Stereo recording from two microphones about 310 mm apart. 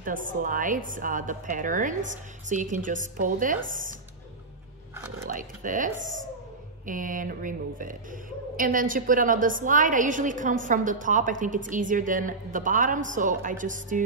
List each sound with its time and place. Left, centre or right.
0.0 s a woman's voice: right
5.3 s a woman's voice: right